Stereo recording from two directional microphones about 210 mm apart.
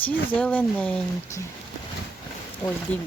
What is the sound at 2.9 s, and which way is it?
Speech, 5° left (ahead or behind).